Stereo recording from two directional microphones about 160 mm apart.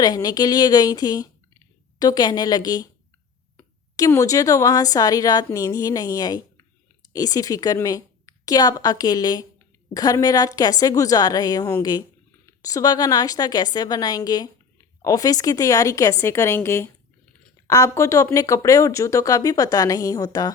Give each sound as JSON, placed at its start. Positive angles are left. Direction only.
{"t": 0.0, "sound": "a woman's voice", "side_deg": 25}